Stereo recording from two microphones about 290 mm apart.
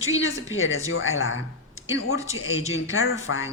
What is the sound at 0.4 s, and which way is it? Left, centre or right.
A woman's voice, left.